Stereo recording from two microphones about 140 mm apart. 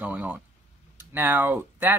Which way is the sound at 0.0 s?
10° right (ahead or behind).